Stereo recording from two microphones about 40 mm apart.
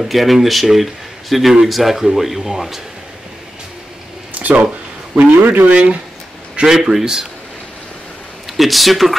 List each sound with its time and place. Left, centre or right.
0.0 s speech: centre
4.4 s a man's voice: right
6.6 s speech: centre
8.5 s speech: centre